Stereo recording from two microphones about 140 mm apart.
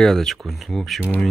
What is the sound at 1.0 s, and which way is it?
Speech, 10° left (ahead or behind).